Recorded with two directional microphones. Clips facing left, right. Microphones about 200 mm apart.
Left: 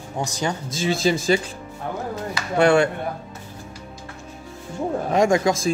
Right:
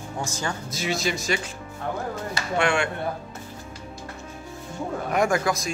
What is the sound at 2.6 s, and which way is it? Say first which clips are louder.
Speech: left 8 dB; 40° left (ahead or behind).